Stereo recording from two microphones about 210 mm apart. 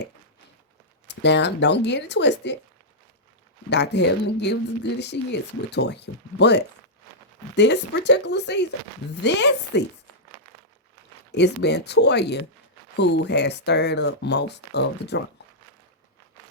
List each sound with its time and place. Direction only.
1.0 s speech: 55° left (ahead or behind)
3.7 s speech: 55° left (ahead or behind)
11.3 s speech: 55° left (ahead or behind)